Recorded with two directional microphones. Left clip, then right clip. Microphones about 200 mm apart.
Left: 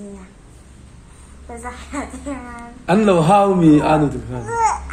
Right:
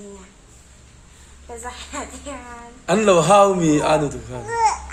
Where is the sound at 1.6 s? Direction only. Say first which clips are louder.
Left 3 dB; 5° left (ahead or behind).